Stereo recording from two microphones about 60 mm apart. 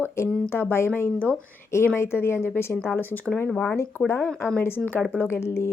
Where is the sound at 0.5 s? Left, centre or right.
Left.